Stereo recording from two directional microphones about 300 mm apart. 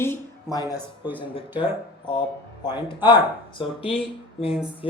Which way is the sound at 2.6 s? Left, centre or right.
Centre.